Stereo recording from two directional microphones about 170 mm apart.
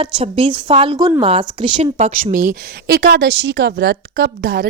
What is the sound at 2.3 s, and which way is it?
A woman's voice, 55° right (ahead or behind).